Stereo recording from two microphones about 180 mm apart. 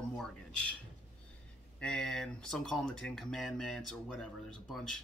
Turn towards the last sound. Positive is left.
turn(degrees=0)  # may be behind; listen again after turning